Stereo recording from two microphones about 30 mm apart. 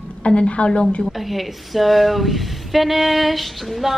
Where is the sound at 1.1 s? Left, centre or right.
Centre.